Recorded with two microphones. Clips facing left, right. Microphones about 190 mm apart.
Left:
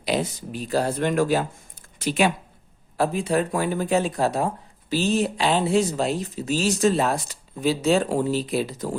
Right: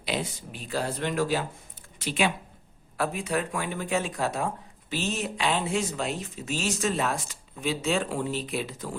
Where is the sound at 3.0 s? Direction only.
30° left (ahead or behind).